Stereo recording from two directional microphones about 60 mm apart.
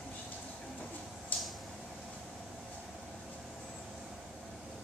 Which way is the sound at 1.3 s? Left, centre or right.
Left.